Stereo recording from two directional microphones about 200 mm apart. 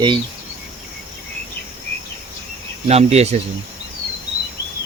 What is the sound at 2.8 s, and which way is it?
Speech, 30° right (ahead or behind).